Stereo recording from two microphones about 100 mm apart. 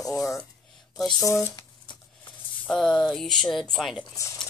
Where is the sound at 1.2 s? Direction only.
30° left (ahead or behind).